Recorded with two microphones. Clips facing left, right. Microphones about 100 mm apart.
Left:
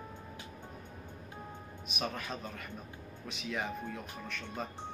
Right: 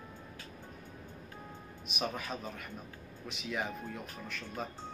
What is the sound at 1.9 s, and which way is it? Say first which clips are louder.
Speech: right 1 dB; centre (ahead or behind).